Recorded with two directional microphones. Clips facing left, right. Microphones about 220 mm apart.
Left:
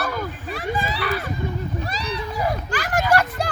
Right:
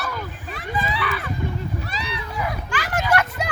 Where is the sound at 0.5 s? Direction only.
40° left (ahead or behind).